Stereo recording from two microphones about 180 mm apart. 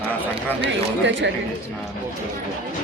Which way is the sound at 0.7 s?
90° right.